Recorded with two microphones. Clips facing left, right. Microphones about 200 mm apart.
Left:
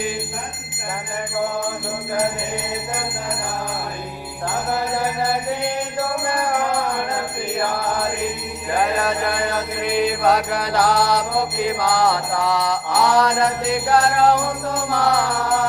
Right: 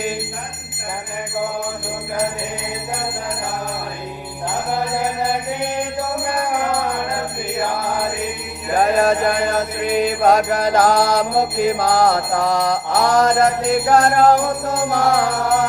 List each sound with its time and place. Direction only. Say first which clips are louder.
8.8 s music: right 6 dB; 45° right (ahead or behind)